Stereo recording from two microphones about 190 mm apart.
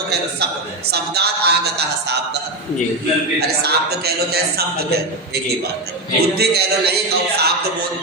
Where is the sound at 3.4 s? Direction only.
55° right (ahead or behind).